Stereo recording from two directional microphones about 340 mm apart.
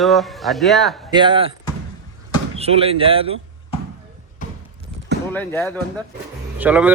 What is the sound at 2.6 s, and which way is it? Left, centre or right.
Speech, centre.